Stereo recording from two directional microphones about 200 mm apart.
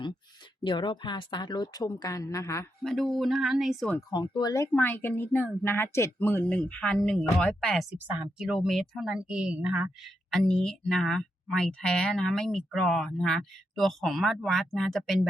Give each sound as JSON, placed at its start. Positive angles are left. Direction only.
{"t": 0.6, "sound": "a woman's voice", "side_deg": 25}
{"t": 2.8, "sound": "speech", "side_deg": 0}
{"t": 4.1, "sound": "speech", "side_deg": 20}